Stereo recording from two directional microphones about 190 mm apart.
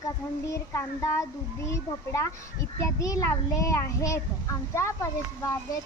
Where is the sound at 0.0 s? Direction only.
15° left (ahead or behind).